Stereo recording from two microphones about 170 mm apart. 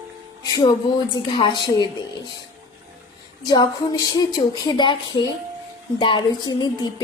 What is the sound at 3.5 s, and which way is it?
Speech, 25° left (ahead or behind).